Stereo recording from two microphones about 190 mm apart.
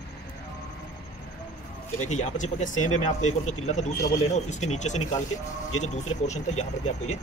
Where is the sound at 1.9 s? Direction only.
40° left (ahead or behind).